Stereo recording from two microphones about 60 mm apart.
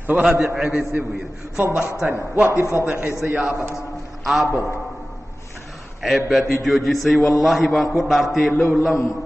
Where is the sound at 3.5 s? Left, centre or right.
Right.